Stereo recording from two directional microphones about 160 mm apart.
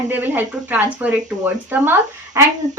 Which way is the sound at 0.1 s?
10° right (ahead or behind).